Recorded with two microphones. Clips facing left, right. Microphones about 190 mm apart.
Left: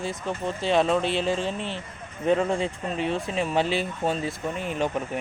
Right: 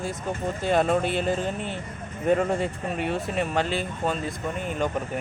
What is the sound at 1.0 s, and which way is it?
Speech, 50° right (ahead or behind).